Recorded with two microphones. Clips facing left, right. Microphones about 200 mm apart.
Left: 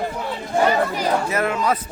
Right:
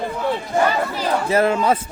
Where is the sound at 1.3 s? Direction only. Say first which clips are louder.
Right 4 dB; 30° right (ahead or behind).